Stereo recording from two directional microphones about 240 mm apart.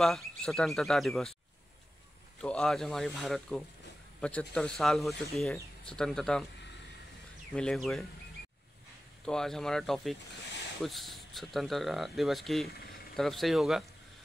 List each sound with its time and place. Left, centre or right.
0.0 s speech: centre
2.4 s speech: centre
7.5 s speech: centre
9.2 s speech: centre
12.6 s vehicle: left
13.1 s speech: centre